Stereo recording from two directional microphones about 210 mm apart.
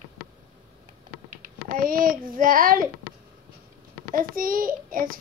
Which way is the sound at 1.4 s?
40° right (ahead or behind).